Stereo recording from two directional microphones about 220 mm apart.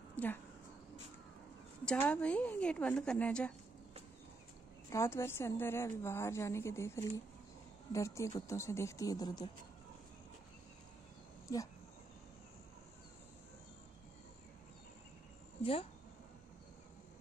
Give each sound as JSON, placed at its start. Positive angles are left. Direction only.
{"t": 0.1, "sound": "a sound", "side_deg": 10}
{"t": 1.9, "sound": "a woman's voice", "side_deg": 5}
{"t": 4.8, "sound": "a woman's voice", "side_deg": 10}
{"t": 11.4, "sound": "speech", "side_deg": 15}
{"t": 15.6, "sound": "speech", "side_deg": 25}